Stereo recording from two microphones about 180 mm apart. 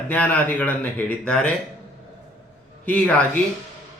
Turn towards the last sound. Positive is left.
turn(degrees=10)  # may be behind; listen again after turning